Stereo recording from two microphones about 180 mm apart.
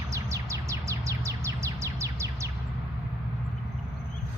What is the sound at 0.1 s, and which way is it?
Chirp, 15° right (ahead or behind).